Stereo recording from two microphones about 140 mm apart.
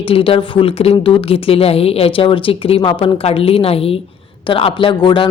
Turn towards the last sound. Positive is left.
turn(degrees=35)  # may be behind; listen again after turning